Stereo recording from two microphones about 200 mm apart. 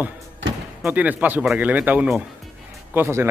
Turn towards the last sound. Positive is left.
turn(degrees=-10)  # may be behind; listen again after turning